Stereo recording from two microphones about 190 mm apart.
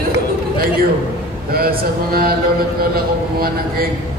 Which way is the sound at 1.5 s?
50° right (ahead or behind).